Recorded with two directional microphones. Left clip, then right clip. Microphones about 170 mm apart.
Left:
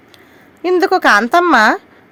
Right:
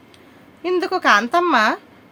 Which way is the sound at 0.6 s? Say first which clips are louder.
Left 7 dB; 45° left (ahead or behind).